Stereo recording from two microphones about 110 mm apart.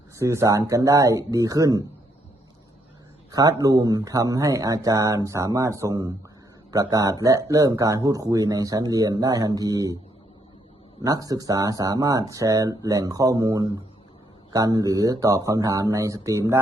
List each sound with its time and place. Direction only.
0.2 s speech: 25° right (ahead or behind)
3.3 s speech: 35° right (ahead or behind)
11.0 s speech: 35° right (ahead or behind)